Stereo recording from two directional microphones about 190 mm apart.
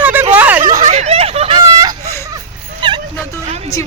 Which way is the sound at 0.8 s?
35° right (ahead or behind).